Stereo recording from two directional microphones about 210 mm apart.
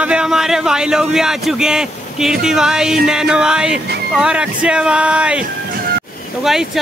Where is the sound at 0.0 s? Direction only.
5° right (ahead or behind).